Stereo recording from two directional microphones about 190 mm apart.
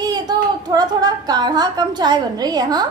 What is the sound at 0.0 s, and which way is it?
A woman's voice, 20° right (ahead or behind).